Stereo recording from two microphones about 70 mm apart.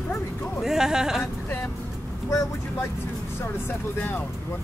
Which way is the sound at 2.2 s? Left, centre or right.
Left.